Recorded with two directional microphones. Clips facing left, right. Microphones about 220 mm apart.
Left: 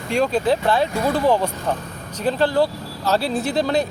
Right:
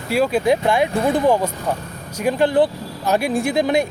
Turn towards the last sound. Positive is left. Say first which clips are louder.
# right 2 dB
turn(degrees=-15)  # may be behind; listen again after turning